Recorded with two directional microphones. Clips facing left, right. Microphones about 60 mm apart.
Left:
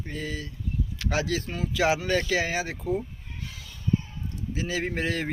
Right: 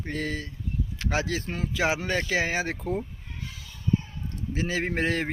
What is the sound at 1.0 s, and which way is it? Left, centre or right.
Speech, right.